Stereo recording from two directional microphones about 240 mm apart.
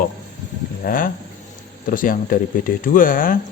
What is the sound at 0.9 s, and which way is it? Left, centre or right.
Speech, left.